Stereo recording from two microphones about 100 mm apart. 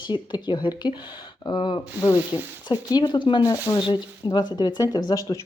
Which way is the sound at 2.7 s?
45° left (ahead or behind).